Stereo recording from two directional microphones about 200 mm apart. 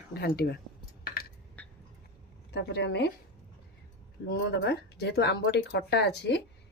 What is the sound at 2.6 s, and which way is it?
Speech, 60° left (ahead or behind).